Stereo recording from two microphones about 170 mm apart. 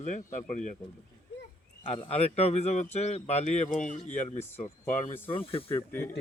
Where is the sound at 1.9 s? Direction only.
35° left (ahead or behind).